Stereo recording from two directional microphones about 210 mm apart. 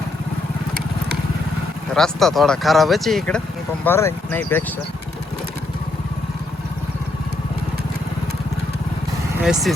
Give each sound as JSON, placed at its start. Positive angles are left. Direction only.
{"t": 2.0, "sound": "speech", "side_deg": 0}
{"t": 9.4, "sound": "speech", "side_deg": -5}